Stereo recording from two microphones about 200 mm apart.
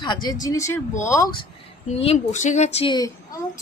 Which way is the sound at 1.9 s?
30° left (ahead or behind).